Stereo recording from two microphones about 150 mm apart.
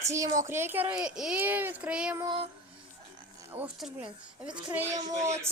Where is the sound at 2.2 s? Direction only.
30° right (ahead or behind).